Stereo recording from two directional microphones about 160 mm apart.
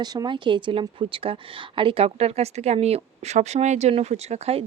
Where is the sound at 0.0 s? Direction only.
25° right (ahead or behind).